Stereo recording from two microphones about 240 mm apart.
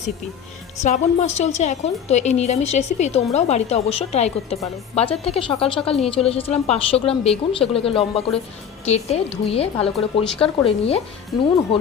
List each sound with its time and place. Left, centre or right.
0.8 s a woman's voice: left